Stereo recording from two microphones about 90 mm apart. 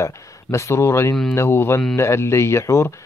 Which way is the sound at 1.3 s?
25° left (ahead or behind).